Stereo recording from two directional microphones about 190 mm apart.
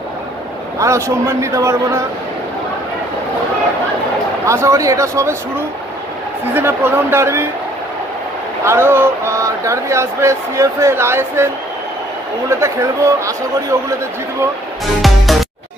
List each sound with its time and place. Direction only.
0.7 s speech: 15° right (ahead or behind)
4.5 s speech: 15° right (ahead or behind)
6.5 s speech: 10° right (ahead or behind)
8.6 s speech: 15° right (ahead or behind)
12.4 s speech: 15° right (ahead or behind)
15.0 s music: centre (ahead or behind)